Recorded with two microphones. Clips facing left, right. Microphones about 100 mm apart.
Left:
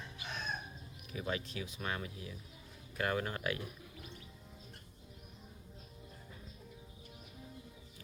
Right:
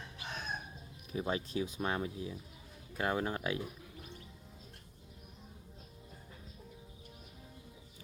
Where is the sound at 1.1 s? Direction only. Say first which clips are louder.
Right 4 dB; 30° right (ahead or behind).